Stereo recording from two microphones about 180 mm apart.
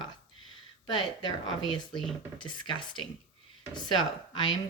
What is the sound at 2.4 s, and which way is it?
Speech, 25° left (ahead or behind).